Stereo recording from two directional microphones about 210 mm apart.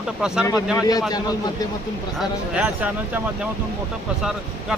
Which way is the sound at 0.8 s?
20° left (ahead or behind).